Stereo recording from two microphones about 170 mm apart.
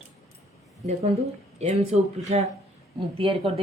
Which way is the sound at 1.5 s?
40° right (ahead or behind).